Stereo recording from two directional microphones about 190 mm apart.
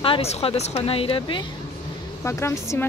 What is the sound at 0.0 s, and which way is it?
Speech, 30° left (ahead or behind).